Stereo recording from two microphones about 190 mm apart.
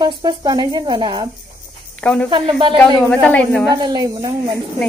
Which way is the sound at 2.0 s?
5° left (ahead or behind).